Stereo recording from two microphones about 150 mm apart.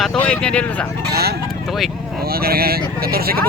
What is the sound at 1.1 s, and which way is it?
Speech, 90° right.